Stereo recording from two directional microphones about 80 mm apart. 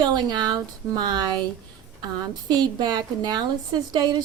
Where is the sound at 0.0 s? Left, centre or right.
Right.